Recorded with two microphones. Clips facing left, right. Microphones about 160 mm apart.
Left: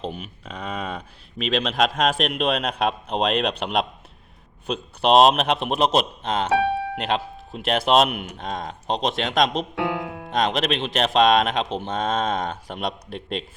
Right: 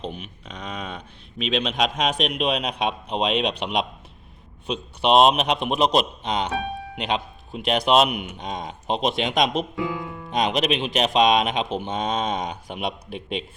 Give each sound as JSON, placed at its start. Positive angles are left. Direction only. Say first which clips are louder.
{"t": 0.0, "sound": "speech", "louder": "left 2 dB", "side_deg": 5}
{"t": 5.0, "sound": "speech", "louder": "left 1 dB", "side_deg": 0}
{"t": 9.7, "sound": "speech", "louder": "left 2 dB", "side_deg": 80}
{"t": 10.3, "sound": "speech", "louder": "even", "side_deg": 0}